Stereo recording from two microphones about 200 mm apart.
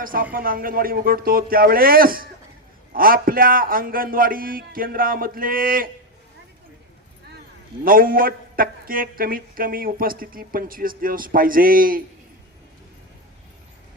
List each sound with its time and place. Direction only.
0.0 s speech: 45° right (ahead or behind)
7.9 s speech: 45° right (ahead or behind)